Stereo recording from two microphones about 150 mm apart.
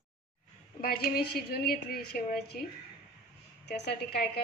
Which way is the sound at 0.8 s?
90° left.